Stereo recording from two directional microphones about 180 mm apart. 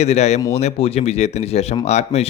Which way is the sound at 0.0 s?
35° left (ahead or behind).